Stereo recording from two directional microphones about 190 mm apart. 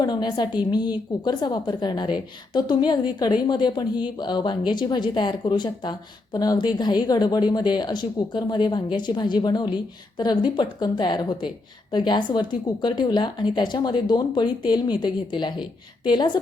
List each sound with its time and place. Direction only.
0.0 s speech: 20° left (ahead or behind)